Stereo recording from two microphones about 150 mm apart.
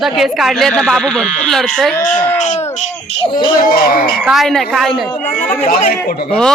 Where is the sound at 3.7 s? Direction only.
85° left.